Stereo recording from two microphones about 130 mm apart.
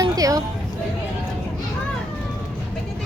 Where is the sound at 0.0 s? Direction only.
25° right (ahead or behind).